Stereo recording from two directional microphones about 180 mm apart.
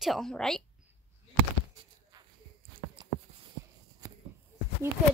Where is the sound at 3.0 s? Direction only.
25° right (ahead or behind).